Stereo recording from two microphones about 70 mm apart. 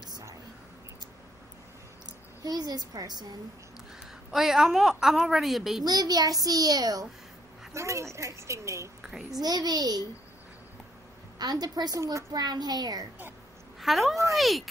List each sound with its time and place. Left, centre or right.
2.0 s a woman's voice: right
4.3 s a woman's voice: centre
5.9 s a child's voice: right
7.7 s speech: right
9.3 s a child's voice: right
11.3 s a child's voice: right
12.0 s speech: right
12.3 s a child's voice: right
13.7 s a woman's voice: centre